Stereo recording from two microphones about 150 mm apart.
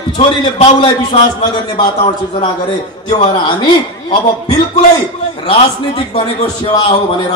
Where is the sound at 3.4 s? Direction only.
30° left (ahead or behind).